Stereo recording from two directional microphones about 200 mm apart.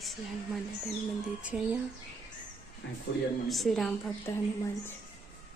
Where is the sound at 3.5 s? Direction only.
Centre (ahead or behind).